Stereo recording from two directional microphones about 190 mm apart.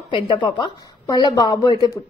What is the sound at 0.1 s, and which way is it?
A woman's voice, 25° left (ahead or behind).